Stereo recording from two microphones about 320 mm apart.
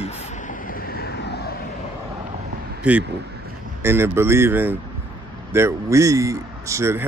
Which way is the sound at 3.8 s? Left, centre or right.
Centre.